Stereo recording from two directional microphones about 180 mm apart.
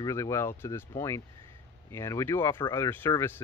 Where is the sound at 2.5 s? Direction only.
25° left (ahead or behind).